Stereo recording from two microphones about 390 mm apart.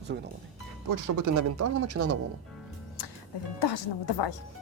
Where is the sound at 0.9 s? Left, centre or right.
Right.